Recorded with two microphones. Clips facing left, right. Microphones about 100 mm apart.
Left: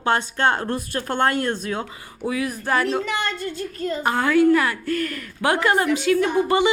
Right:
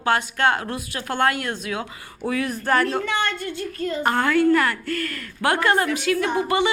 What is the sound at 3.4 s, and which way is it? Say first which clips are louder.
Speech: even; 35° left (ahead or behind).